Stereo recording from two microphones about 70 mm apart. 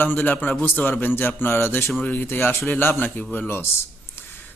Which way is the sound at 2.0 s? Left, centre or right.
Left.